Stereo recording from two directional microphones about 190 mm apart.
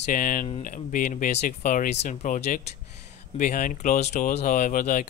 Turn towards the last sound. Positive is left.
turn(degrees=45)  # may be behind; listen again after turning